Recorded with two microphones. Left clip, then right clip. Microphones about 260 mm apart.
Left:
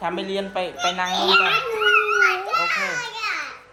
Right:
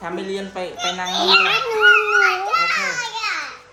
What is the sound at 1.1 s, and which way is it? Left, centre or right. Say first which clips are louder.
Dog: right 3 dB; centre.